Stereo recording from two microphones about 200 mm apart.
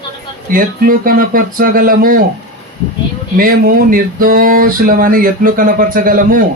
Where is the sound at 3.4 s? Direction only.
45° right (ahead or behind).